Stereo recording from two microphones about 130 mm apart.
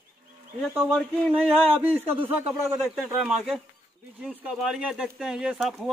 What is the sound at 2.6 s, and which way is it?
Speech, 15° right (ahead or behind).